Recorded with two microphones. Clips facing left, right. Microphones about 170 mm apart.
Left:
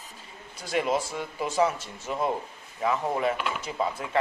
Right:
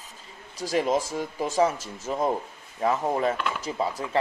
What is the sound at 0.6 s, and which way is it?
Speech, 35° right (ahead or behind).